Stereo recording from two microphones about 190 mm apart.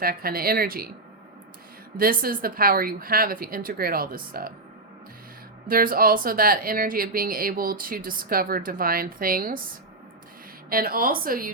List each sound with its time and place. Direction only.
0.0 s speech: 50° right (ahead or behind)
2.0 s speech: 50° right (ahead or behind)
5.6 s speech: 50° right (ahead or behind)
10.7 s speech: 50° right (ahead or behind)